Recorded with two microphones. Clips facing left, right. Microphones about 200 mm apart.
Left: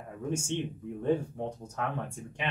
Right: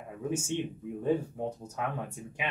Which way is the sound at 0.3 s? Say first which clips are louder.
Even; 5° right (ahead or behind).